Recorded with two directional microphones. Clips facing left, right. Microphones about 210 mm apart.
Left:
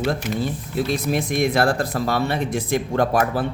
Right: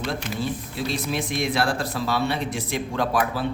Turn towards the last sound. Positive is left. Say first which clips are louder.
# left 4 dB
turn(degrees=50)  # may be behind; listen again after turning